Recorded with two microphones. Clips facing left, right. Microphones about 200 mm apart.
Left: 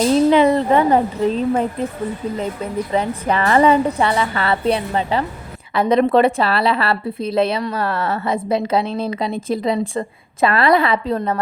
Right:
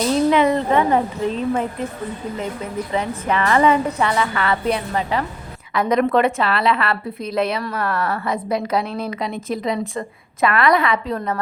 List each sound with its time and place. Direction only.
0.3 s a woman's voice: 35° left (ahead or behind)
2.9 s a woman's voice: 35° left (ahead or behind)